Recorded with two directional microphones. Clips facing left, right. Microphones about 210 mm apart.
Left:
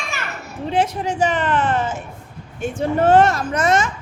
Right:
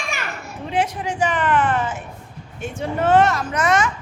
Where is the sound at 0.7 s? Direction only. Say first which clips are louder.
Left 3 dB; 40° left (ahead or behind).